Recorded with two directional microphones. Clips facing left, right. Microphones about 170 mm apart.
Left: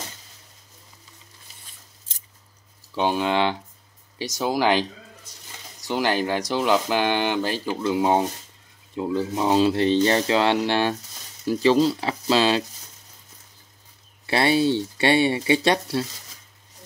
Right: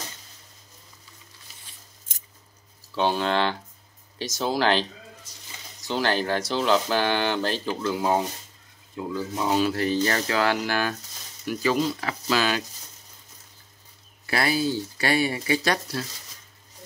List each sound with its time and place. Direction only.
2.9 s speech: 15° left (ahead or behind)
5.9 s speech: 15° left (ahead or behind)
14.2 s speech: 25° left (ahead or behind)